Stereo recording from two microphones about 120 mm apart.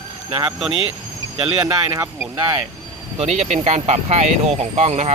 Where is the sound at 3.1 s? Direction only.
65° right (ahead or behind).